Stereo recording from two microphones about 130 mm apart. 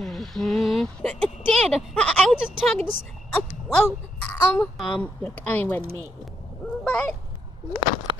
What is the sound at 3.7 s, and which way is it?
Speech, 15° left (ahead or behind).